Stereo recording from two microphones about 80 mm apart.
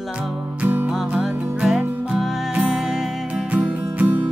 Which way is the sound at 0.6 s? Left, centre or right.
Right.